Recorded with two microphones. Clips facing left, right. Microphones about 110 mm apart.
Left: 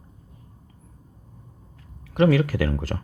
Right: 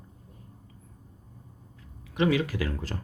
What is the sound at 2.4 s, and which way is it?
Speech, 45° left (ahead or behind).